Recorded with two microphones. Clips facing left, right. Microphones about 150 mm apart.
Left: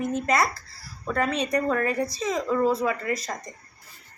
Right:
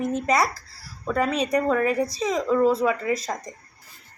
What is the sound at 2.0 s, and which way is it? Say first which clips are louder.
Speech: right 3 dB; 30° right (ahead or behind).